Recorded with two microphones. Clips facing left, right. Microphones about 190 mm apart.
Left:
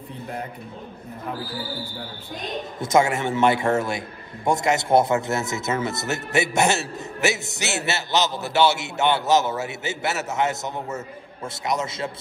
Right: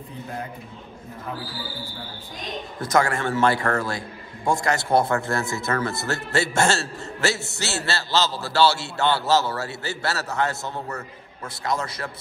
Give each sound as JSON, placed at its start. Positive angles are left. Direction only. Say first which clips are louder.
{"t": 2.8, "sound": "a man's voice", "louder": "left 2 dB", "side_deg": 25}